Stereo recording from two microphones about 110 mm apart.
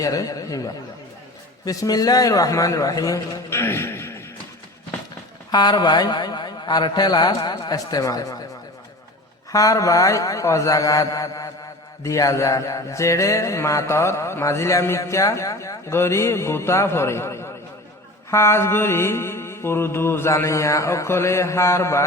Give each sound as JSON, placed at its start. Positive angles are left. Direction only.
{"t": 0.0, "sound": "a man's voice", "side_deg": 35}
{"t": 5.5, "sound": "a man's voice", "side_deg": 40}
{"t": 9.5, "sound": "a man's voice", "side_deg": 30}
{"t": 12.0, "sound": "mantra", "side_deg": 30}